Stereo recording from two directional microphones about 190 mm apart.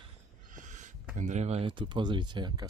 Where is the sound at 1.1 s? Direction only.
40° right (ahead or behind); by 2.7 s 25° right (ahead or behind).